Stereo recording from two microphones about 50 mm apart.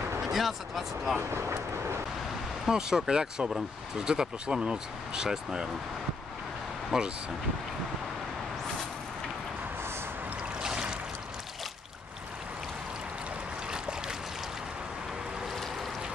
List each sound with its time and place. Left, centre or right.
0.2 s speech: centre
1.3 s speech: right
2.7 s speech: centre
6.9 s speech: centre
10.6 s a sound: centre
13.7 s boat: centre